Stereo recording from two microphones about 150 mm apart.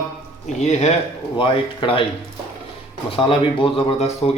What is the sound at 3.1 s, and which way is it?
Speech, 35° left (ahead or behind).